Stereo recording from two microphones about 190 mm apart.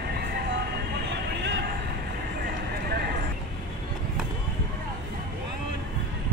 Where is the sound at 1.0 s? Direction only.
65° right (ahead or behind).